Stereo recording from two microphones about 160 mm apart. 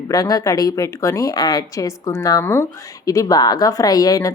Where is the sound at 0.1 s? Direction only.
25° left (ahead or behind).